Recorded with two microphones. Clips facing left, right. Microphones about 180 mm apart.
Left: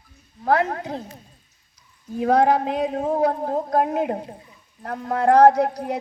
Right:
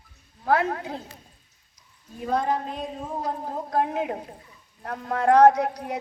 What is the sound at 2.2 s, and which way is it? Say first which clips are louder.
A man's voice: left 8 dB; 80° left.